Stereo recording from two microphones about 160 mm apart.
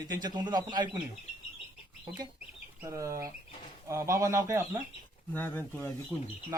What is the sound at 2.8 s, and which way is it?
Speech, 20° right (ahead or behind).